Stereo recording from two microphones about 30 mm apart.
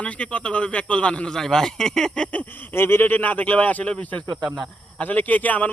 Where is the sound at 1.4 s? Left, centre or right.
Centre.